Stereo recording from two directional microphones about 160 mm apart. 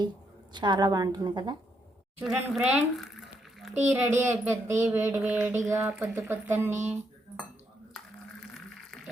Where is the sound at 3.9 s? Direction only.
15° right (ahead or behind).